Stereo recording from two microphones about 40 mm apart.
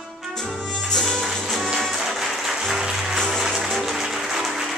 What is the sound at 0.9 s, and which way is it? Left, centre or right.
Music, centre.